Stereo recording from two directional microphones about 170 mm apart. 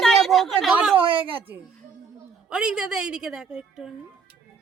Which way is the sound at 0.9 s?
30° right (ahead or behind).